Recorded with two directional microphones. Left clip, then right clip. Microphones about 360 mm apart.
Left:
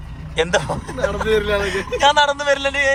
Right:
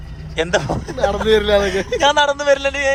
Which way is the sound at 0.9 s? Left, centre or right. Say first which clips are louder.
Right 4 dB; right.